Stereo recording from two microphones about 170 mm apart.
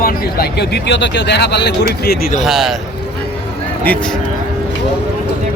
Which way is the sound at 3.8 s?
5° left (ahead or behind).